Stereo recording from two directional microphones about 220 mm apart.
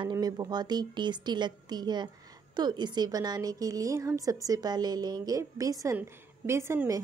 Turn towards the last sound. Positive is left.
turn(degrees=-10)  # may be behind; listen again after turning